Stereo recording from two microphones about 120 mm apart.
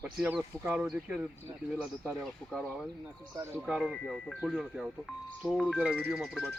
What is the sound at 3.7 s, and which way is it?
Speech, centre (ahead or behind).